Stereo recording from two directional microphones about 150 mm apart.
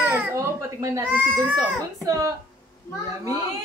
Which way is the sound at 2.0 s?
25° right (ahead or behind).